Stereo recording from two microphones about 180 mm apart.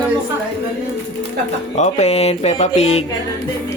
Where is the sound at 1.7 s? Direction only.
40° left (ahead or behind).